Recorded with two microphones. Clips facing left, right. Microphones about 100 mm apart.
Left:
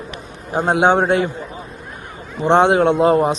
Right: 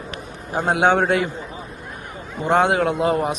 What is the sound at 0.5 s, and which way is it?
Speech, 25° left (ahead or behind).